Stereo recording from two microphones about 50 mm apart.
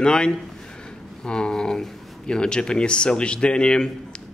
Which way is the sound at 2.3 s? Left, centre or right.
Centre.